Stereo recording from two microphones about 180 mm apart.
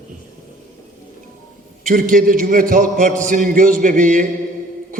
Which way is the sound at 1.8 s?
50° right (ahead or behind).